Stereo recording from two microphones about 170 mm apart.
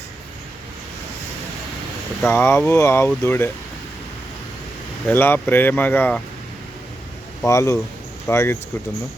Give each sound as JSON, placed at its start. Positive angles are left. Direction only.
{"t": 2.2, "sound": "speech", "side_deg": 15}
{"t": 5.0, "sound": "speech", "side_deg": 10}
{"t": 7.4, "sound": "speech", "side_deg": 15}